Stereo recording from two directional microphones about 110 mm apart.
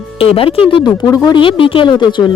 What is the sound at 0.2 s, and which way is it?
Speech, 60° left (ahead or behind).